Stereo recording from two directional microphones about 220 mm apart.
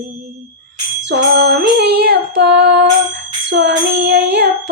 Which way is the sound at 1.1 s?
50° right (ahead or behind).